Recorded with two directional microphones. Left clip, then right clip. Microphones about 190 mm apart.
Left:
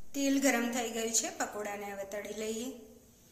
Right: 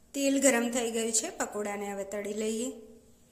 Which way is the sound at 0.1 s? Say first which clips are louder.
Right 4 dB; 50° right (ahead or behind).